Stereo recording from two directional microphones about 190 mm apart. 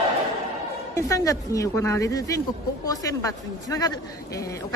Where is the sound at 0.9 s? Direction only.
15° left (ahead or behind).